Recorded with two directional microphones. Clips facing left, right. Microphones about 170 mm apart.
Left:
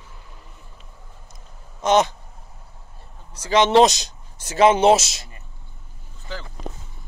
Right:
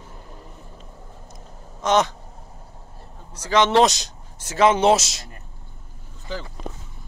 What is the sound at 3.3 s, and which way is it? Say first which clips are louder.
Speech: left 2 dB; 15° left (ahead or behind).